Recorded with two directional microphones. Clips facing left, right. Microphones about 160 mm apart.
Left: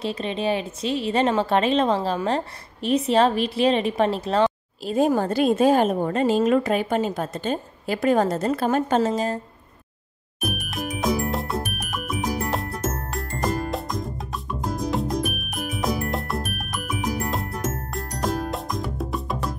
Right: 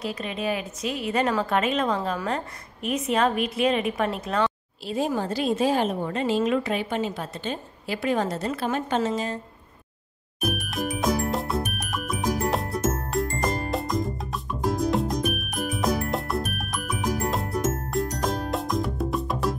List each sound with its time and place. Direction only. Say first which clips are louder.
0.0 s a woman's voice: left 4 dB; 30° left (ahead or behind)
4.8 s a woman's voice: left 6 dB; 50° left (ahead or behind)
10.4 s music: right 1 dB; centre (ahead or behind)